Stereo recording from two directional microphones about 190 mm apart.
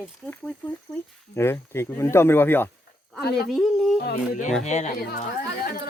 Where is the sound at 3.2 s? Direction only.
60° left (ahead or behind).